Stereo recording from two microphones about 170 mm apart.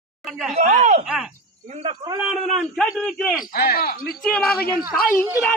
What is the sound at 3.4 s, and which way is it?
Speech, 60° left (ahead or behind).